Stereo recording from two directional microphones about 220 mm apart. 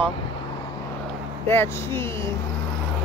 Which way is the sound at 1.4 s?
10° left (ahead or behind).